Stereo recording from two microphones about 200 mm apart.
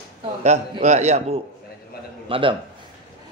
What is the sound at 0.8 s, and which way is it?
A woman's voice, 35° right (ahead or behind).